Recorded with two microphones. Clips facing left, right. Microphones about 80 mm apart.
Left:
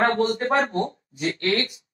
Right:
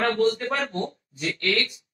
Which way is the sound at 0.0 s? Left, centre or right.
Left.